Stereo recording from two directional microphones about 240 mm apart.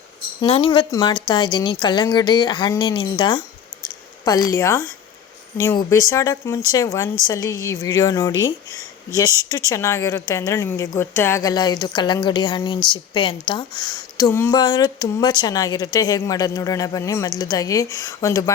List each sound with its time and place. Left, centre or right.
0.4 s a woman's voice: left